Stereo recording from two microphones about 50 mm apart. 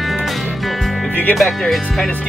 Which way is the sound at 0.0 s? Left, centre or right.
Centre.